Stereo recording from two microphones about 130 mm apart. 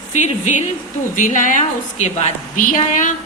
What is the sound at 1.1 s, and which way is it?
A woman's voice, 80° left.